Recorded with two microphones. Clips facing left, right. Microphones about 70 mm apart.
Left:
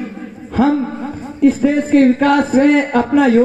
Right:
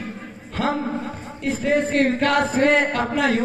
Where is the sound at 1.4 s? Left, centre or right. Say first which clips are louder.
Left 8 dB; centre.